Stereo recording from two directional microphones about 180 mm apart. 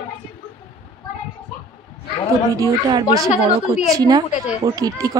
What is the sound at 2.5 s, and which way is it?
Speech, 20° right (ahead or behind).